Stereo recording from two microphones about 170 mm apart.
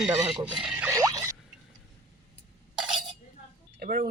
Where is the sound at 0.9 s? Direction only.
20° right (ahead or behind).